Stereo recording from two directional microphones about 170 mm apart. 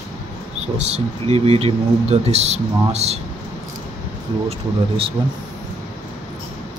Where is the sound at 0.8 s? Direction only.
40° right (ahead or behind).